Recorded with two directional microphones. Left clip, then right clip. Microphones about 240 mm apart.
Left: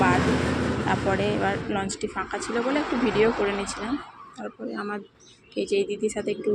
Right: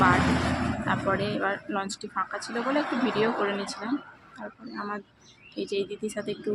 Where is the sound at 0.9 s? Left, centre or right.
Centre.